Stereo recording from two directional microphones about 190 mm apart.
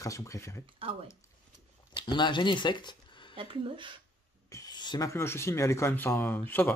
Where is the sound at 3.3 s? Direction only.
25° right (ahead or behind).